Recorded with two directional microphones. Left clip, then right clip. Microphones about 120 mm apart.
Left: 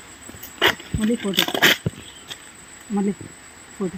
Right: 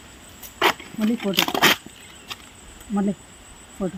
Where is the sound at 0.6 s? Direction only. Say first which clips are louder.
Left 1 dB; 30° left (ahead or behind).